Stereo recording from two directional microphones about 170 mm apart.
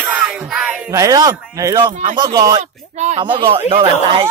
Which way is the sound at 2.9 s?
40° right (ahead or behind).